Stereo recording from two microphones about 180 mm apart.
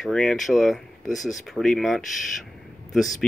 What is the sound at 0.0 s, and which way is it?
Speech, centre (ahead or behind).